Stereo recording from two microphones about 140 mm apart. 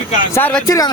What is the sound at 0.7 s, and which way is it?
Speech, 25° left (ahead or behind).